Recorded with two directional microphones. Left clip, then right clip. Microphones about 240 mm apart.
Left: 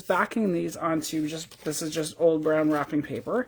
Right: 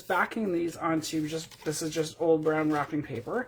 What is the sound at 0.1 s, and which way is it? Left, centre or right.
Speech, left.